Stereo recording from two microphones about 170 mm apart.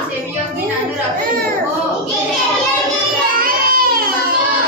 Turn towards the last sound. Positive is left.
turn(degrees=-55)  # may be behind; listen again after turning